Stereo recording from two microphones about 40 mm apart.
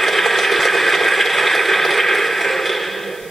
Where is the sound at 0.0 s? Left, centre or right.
Centre.